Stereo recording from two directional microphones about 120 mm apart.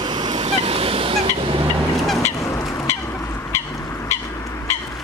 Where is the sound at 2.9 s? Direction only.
20° left (ahead or behind).